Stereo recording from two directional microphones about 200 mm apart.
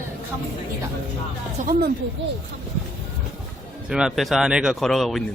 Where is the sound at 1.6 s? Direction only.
45° right (ahead or behind).